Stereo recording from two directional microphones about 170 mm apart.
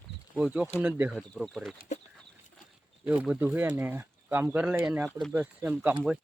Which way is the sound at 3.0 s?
10° right (ahead or behind).